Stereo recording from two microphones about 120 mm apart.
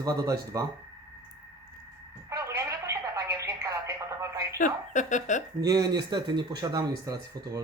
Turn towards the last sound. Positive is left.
turn(degrees=-30)  # may be behind; listen again after turning